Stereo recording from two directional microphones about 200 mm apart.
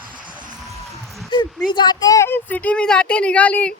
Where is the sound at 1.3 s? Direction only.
25° left (ahead or behind).